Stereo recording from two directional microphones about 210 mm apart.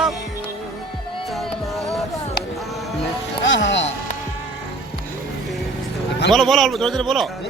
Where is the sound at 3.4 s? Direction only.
60° left (ahead or behind).